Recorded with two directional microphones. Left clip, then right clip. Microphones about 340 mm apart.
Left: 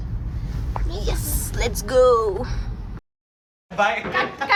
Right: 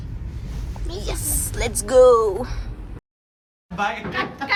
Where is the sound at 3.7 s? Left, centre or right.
Centre.